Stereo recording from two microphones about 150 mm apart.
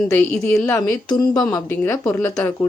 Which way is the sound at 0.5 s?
20° left (ahead or behind).